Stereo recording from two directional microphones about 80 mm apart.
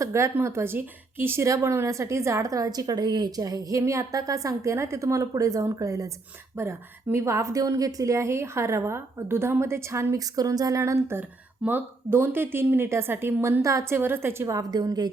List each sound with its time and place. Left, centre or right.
0.0 s a woman's voice: right
6.6 s a woman's voice: right
14.0 s a woman's voice: right
14.5 s a woman's voice: right